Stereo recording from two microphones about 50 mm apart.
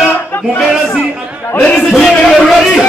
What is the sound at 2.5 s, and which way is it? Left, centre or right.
Speech, centre.